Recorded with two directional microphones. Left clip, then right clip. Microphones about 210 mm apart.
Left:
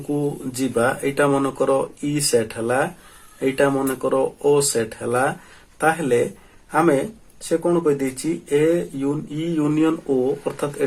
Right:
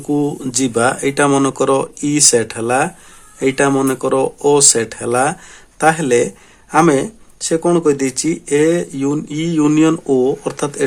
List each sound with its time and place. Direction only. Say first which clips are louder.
0.1 s speech: right 7 dB; 35° right (ahead or behind)